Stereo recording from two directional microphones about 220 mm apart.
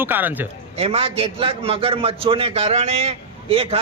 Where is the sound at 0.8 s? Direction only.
25° right (ahead or behind).